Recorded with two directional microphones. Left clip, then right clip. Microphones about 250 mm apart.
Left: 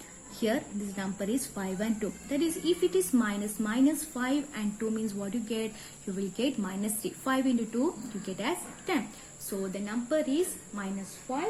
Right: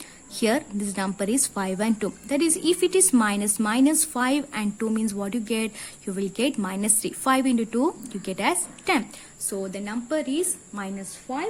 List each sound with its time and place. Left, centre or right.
0.3 s a woman's voice: right